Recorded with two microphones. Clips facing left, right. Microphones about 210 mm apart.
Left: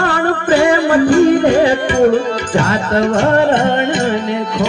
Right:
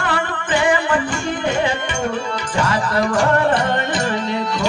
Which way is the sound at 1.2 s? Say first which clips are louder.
Left 10 dB; 35° left (ahead or behind).